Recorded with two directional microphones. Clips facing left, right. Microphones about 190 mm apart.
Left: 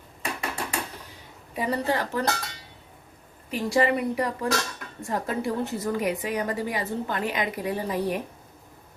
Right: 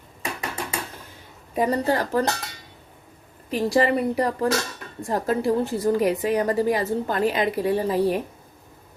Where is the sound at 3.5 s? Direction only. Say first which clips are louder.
Right 3 dB; 40° right (ahead or behind).